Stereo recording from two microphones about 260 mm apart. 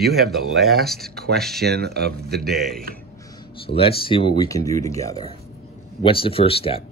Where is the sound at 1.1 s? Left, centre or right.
Right.